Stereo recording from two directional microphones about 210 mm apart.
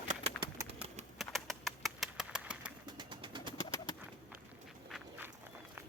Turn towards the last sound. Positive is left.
turn(degrees=-5)  # may be behind; listen again after turning